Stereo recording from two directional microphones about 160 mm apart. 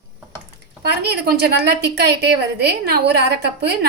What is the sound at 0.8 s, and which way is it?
A woman's voice, 90° right.